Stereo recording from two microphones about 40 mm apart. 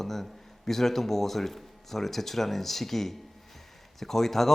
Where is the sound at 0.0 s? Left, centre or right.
Centre.